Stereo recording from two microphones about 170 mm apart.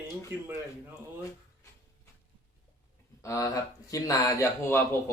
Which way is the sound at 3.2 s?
20° left (ahead or behind).